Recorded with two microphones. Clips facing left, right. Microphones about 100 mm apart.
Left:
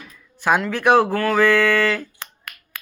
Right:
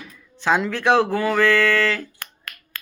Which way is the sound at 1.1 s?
10° right (ahead or behind).